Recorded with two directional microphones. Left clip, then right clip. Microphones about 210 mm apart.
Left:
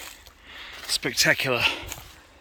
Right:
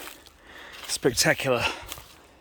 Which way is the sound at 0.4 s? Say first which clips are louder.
Left 4 dB; 40° right (ahead or behind).